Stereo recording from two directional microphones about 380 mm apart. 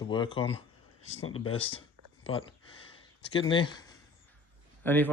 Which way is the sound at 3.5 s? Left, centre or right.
Centre.